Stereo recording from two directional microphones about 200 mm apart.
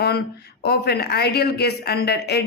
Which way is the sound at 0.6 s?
55° left (ahead or behind).